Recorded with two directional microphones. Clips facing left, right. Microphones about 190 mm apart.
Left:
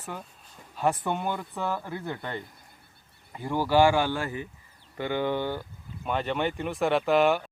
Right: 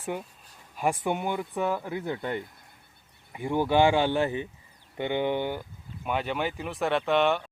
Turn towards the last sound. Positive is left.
turn(degrees=0)  # may be behind; listen again after turning